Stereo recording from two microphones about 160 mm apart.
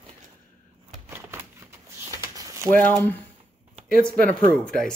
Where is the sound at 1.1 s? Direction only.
15° right (ahead or behind).